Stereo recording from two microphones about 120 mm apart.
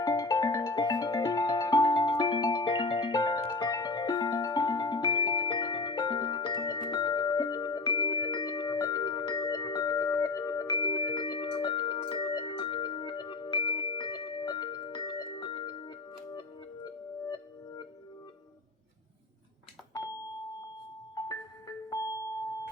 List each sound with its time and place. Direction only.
0.0 s music: 30° left (ahead or behind)
21.2 s music: 30° left (ahead or behind)